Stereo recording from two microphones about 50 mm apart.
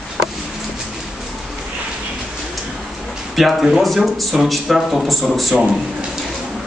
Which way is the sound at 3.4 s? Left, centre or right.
Centre.